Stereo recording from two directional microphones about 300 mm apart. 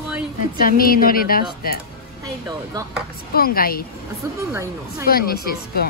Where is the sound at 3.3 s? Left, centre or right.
Left.